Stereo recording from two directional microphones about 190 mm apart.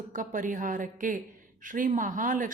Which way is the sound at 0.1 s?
45° right (ahead or behind).